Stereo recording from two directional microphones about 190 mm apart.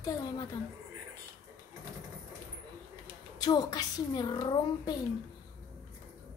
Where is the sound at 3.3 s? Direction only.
20° left (ahead or behind).